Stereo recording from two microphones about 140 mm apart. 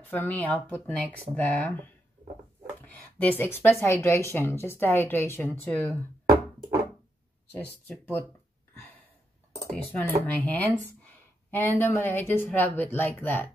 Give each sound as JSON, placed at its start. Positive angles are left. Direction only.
{"t": 0.0, "sound": "speech", "side_deg": 15}
{"t": 2.8, "sound": "speech", "side_deg": 10}
{"t": 9.7, "sound": "speech", "side_deg": 10}